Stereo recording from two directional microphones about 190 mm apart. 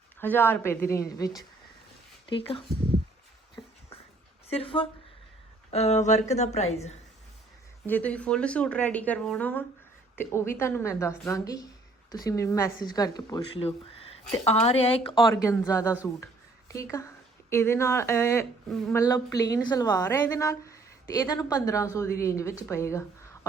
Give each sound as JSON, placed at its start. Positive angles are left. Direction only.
{"t": 0.2, "sound": "a woman's voice", "side_deg": 10}
{"t": 2.3, "sound": "speech", "side_deg": 30}
{"t": 4.4, "sound": "a woman's voice", "side_deg": 30}
{"t": 7.9, "sound": "a woman's voice", "side_deg": 10}
{"t": 15.4, "sound": "a woman's voice", "side_deg": 15}
{"t": 16.2, "sound": "a sound", "side_deg": 15}
{"t": 17.5, "sound": "a woman's voice", "side_deg": 15}